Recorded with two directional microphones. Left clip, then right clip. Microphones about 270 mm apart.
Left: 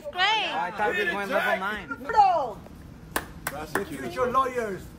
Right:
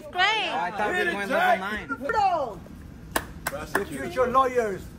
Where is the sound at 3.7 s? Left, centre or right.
Centre.